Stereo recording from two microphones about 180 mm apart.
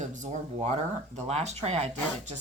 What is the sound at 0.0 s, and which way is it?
Speech, 45° right (ahead or behind).